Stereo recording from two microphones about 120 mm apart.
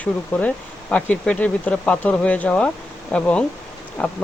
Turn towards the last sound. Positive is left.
turn(degrees=10)  # may be behind; listen again after turning